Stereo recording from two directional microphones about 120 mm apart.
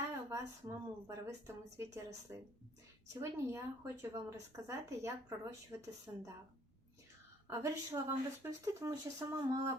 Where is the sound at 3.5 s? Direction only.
25° right (ahead or behind).